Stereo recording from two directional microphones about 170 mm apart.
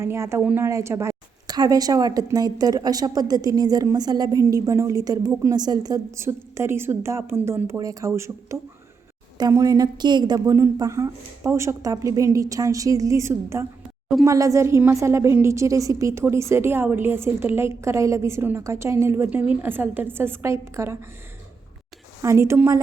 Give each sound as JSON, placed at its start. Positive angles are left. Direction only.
{"t": 0.0, "sound": "a woman's voice", "side_deg": -15}
{"t": 22.2, "sound": "a woman's voice", "side_deg": -15}